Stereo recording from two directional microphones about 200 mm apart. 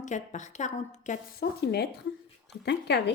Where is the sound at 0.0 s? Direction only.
35° left (ahead or behind).